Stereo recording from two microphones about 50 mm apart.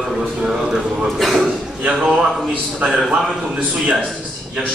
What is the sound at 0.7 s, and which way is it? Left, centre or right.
Speech, centre.